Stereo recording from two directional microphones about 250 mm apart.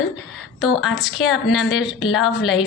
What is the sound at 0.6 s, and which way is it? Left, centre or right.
Speech, centre.